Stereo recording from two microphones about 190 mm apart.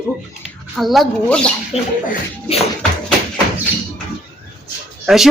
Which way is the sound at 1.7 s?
30° left (ahead or behind).